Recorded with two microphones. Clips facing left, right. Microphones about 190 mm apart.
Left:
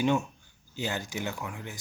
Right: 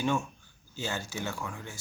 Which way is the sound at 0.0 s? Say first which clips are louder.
Left 3 dB; 20° left (ahead or behind).